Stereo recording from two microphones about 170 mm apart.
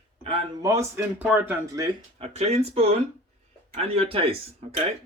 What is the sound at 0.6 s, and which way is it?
Speech, 15° right (ahead or behind).